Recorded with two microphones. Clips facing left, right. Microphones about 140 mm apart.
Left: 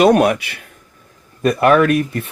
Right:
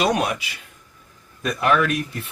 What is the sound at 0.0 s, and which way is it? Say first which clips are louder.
Speech: left 9 dB; 55° left (ahead or behind).